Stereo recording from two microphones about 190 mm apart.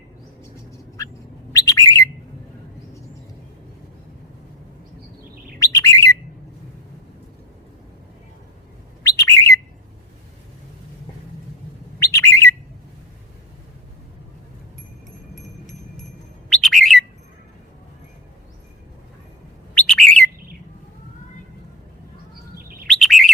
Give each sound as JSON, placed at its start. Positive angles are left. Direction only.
{"t": 1.0, "sound": "bird", "side_deg": 15}
{"t": 5.5, "sound": "bird", "side_deg": 15}
{"t": 9.0, "sound": "bird", "side_deg": 15}
{"t": 11.9, "sound": "bird", "side_deg": 15}
{"t": 16.5, "sound": "bird", "side_deg": 0}
{"t": 19.7, "sound": "bird", "side_deg": 5}
{"t": 22.5, "sound": "chirp", "side_deg": -50}
{"t": 22.9, "sound": "chirp", "side_deg": 0}